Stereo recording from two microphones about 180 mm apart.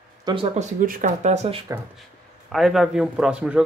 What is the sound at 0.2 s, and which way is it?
Speech, 25° right (ahead or behind).